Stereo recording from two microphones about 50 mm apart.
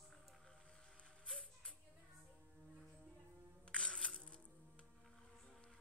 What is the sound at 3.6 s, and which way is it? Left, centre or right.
Music, centre.